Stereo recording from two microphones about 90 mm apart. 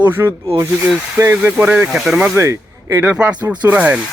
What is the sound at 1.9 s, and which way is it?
Speech, 5° right (ahead or behind).